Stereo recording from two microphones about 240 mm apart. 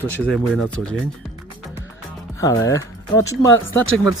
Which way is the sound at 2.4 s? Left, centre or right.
Centre.